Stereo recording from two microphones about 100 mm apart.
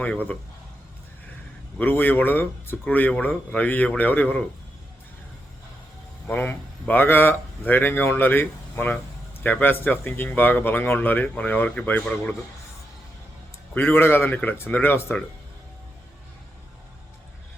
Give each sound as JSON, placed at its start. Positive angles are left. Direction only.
{"t": 0.0, "sound": "speech", "side_deg": 15}
{"t": 1.8, "sound": "speech", "side_deg": 20}
{"t": 6.2, "sound": "speech", "side_deg": 15}
{"t": 13.7, "sound": "speech", "side_deg": 20}